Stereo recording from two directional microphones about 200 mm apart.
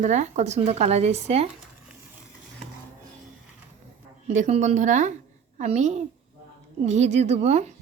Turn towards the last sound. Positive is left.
turn(degrees=-35)  # may be behind; listen again after turning